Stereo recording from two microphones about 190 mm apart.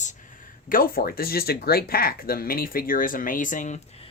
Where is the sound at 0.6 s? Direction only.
50° left (ahead or behind).